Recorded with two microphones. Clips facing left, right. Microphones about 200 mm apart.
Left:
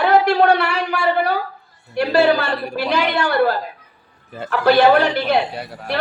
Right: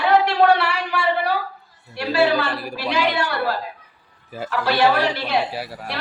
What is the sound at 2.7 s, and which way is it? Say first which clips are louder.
A man's voice: left 2 dB; 55° left (ahead or behind).